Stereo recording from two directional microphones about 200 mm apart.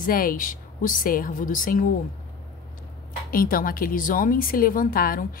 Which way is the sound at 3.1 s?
45° left (ahead or behind).